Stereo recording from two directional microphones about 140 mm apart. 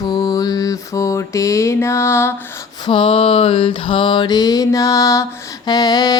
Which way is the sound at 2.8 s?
40° left (ahead or behind).